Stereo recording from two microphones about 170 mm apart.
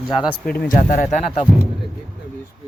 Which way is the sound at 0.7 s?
50° left (ahead or behind).